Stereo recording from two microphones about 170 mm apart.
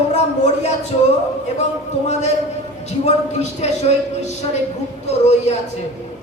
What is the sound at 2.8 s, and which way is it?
Speech, 40° left (ahead or behind).